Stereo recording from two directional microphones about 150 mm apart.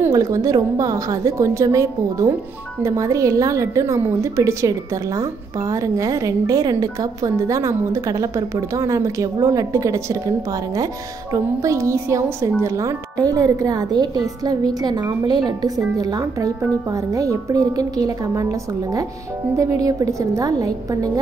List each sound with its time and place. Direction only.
0.0 s speech: 20° right (ahead or behind)
11.3 s speech: 20° right (ahead or behind)